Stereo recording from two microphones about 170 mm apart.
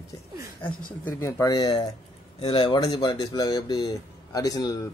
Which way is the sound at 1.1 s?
15° left (ahead or behind).